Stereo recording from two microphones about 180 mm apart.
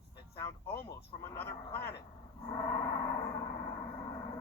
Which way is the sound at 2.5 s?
20° left (ahead or behind).